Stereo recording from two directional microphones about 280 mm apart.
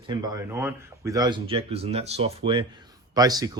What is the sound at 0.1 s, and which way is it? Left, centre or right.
Speech, centre.